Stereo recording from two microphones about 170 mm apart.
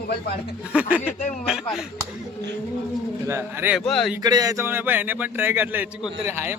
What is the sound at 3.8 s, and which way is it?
Speech, centre (ahead or behind).